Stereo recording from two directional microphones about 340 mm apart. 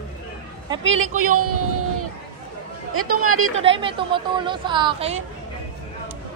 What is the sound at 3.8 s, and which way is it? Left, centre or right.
A woman's voice, centre.